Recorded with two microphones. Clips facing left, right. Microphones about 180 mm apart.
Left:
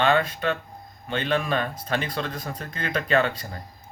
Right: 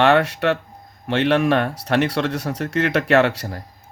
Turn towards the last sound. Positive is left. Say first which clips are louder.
# right 6 dB
turn(degrees=-75)  # may be behind; listen again after turning